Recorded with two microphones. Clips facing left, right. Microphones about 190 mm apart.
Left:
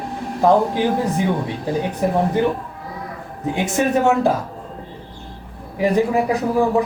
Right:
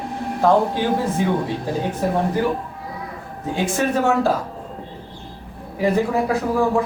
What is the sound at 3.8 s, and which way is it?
Speech, 15° left (ahead or behind).